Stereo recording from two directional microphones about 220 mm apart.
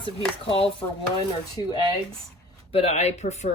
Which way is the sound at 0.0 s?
25° left (ahead or behind).